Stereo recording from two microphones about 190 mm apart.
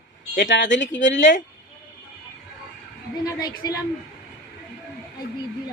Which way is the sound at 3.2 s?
20° left (ahead or behind).